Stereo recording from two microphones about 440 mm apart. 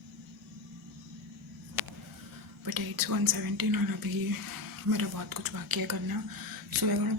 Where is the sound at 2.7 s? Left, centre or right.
Right.